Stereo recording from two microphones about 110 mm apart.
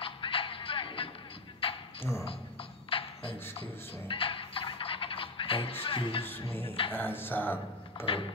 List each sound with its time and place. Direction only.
0.0 s music: 55° left (ahead or behind)
1.6 s beatboxing: 55° left (ahead or behind)
2.9 s beatboxing: 55° left (ahead or behind)
4.1 s music: 55° left (ahead or behind)
6.9 s speech: 20° left (ahead or behind)
8.0 s a sound: 50° left (ahead or behind)